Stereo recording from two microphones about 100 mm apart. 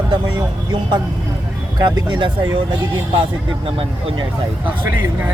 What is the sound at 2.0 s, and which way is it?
Speech, 50° right (ahead or behind).